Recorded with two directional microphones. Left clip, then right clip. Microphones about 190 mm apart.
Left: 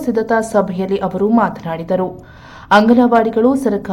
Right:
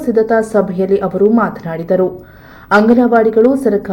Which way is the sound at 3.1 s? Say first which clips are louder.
Right 3 dB; centre (ahead or behind).